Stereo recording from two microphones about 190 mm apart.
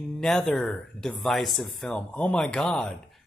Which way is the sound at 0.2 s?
Centre (ahead or behind).